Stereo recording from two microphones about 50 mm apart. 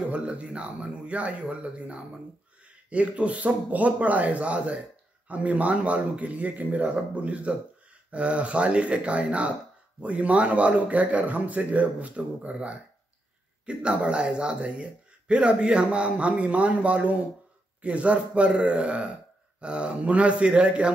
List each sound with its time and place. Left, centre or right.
0.1 s speech: right